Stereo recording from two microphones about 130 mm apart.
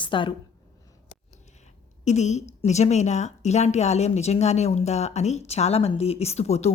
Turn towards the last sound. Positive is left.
turn(degrees=55)  # may be behind; listen again after turning